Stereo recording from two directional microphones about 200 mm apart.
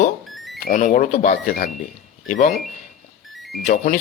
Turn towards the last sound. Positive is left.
turn(degrees=40)  # may be behind; listen again after turning